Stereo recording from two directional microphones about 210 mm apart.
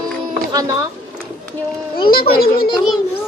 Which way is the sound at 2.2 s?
45° left (ahead or behind).